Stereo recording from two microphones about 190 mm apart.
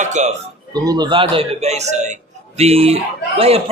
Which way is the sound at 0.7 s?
20° right (ahead or behind).